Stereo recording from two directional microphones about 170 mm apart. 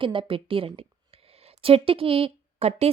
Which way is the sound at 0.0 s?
30° right (ahead or behind).